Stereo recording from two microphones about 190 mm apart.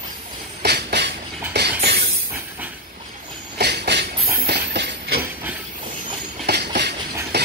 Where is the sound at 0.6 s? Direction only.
60° right (ahead or behind).